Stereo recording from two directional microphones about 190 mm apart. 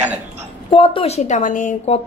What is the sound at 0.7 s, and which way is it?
A woman's voice, 30° left (ahead or behind).